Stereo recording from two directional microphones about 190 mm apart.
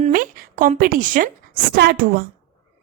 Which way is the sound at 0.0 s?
45° right (ahead or behind).